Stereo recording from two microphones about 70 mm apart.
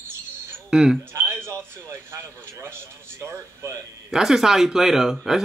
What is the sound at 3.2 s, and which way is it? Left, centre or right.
Speech, right.